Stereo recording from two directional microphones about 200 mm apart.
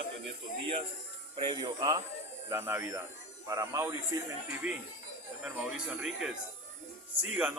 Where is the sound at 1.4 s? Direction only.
20° right (ahead or behind).